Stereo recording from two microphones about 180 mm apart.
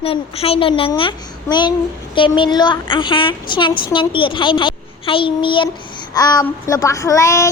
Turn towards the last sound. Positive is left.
turn(degrees=15)  # may be behind; listen again after turning